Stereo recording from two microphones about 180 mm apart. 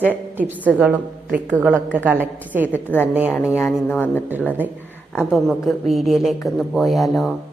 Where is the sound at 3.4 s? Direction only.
5° right (ahead or behind).